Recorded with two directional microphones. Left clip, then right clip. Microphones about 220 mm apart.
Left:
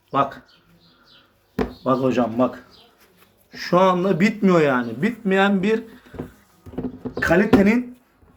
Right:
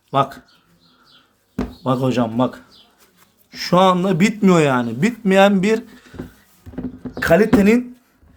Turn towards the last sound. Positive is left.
turn(degrees=-50)  # may be behind; listen again after turning